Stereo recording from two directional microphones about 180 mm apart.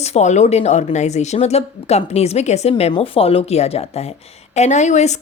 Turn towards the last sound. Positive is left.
turn(degrees=40)  # may be behind; listen again after turning